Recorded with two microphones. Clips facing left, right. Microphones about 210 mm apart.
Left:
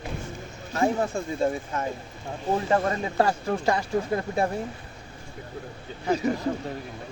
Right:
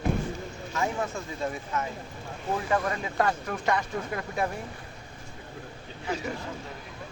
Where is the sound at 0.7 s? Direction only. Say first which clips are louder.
Left 6 dB; 35° left (ahead or behind).